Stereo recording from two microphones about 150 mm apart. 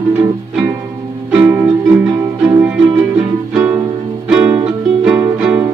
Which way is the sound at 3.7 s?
5° right (ahead or behind).